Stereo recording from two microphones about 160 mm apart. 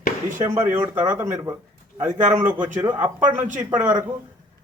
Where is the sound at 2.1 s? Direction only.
55° right (ahead or behind).